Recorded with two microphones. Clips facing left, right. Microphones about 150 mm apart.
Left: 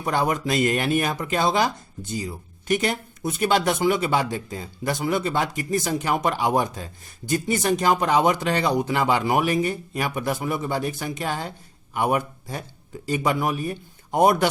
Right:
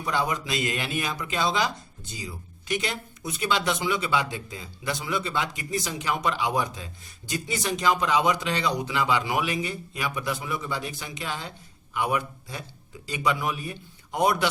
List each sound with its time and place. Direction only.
0.0 s speech: 50° left (ahead or behind)